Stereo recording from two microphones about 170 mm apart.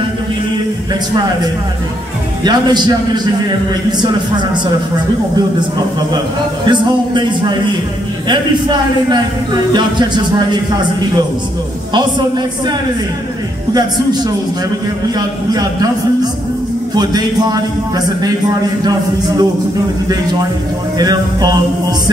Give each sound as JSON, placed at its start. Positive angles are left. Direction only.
{"t": 2.4, "sound": "a man's voice", "side_deg": -25}
{"t": 6.6, "sound": "a man's voice", "side_deg": -25}
{"t": 15.1, "sound": "a man's voice", "side_deg": -25}
{"t": 16.9, "sound": "a man's voice", "side_deg": -25}
{"t": 21.0, "sound": "a man's voice", "side_deg": -25}